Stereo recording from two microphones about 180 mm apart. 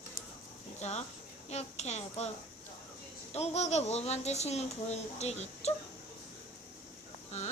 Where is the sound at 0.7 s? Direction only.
40° left (ahead or behind).